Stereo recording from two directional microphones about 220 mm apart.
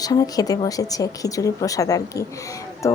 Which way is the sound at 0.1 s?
15° left (ahead or behind).